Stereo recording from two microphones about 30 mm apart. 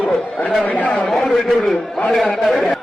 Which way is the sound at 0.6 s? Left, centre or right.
Left.